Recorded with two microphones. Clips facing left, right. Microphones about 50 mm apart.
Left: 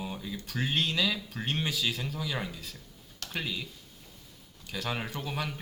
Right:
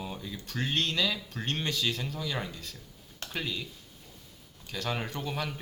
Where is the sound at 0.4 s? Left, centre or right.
Centre.